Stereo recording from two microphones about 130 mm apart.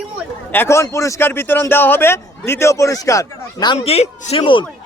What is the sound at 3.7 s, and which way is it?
Speech, 50° left (ahead or behind).